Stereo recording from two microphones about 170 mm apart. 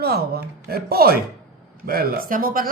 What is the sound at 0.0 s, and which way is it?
Speech, 65° right (ahead or behind).